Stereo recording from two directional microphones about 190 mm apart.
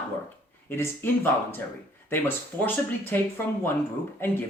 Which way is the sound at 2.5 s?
20° right (ahead or behind).